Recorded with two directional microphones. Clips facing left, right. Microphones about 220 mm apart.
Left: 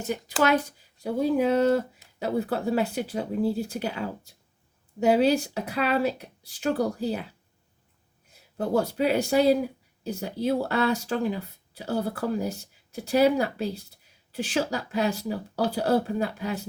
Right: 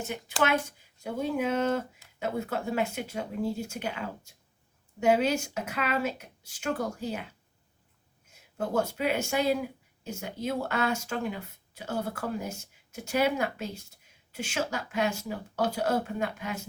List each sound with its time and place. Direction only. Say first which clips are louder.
0.0 s speech: left 4 dB; 40° left (ahead or behind)
8.4 s speech: left 4 dB; 35° left (ahead or behind)